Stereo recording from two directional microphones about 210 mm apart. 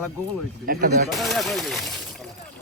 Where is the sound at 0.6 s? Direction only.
45° right (ahead or behind).